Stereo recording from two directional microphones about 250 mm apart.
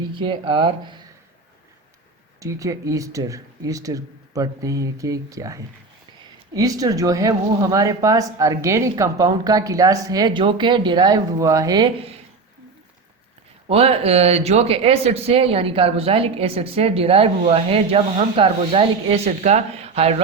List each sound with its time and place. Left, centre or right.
0.1 s speech: centre
2.4 s speech: centre
13.7 s speech: right